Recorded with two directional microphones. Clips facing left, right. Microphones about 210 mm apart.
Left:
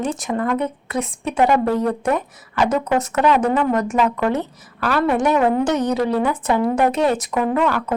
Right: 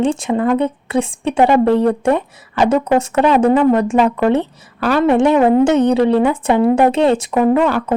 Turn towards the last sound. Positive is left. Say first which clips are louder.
# right 6 dB
turn(degrees=-30)  # may be behind; listen again after turning